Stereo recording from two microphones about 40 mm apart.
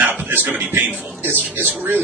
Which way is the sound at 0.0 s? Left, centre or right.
Right.